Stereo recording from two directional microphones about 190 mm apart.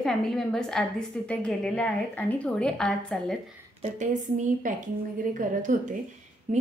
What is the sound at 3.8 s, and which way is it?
Speech, 40° right (ahead or behind).